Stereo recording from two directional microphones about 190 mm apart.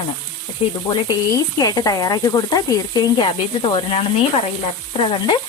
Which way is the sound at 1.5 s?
20° left (ahead or behind).